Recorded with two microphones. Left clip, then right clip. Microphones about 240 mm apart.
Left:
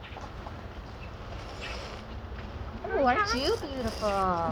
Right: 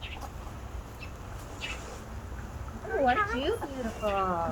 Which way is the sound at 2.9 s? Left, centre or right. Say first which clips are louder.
Left 1 dB; left.